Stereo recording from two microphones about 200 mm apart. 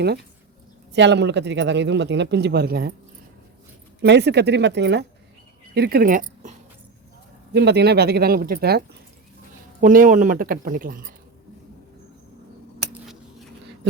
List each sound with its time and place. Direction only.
0.9 s speech: 60° right (ahead or behind)
4.0 s speech: 60° right (ahead or behind); by 6.5 s 40° right (ahead or behind)
7.5 s speech: 55° right (ahead or behind)
9.8 s speech: 40° right (ahead or behind)